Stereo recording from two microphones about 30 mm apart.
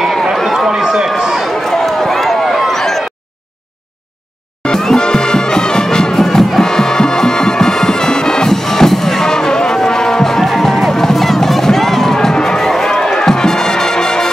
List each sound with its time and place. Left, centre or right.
0.7 s run: centre
1.5 s run: centre
2.7 s a sound: centre
4.6 s music: centre
6.1 s music: centre
6.6 s music: left